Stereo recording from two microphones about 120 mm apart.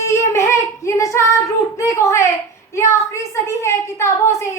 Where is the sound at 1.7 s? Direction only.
25° left (ahead or behind).